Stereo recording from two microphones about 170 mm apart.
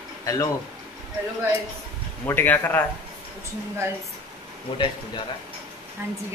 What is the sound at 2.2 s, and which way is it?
Speech, 10° left (ahead or behind).